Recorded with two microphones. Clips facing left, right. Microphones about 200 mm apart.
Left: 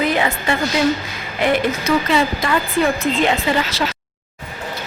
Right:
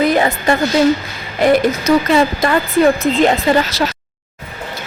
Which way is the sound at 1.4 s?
40° right (ahead or behind).